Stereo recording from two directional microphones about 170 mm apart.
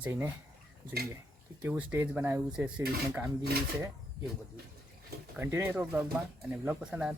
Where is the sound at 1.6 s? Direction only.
10° right (ahead or behind).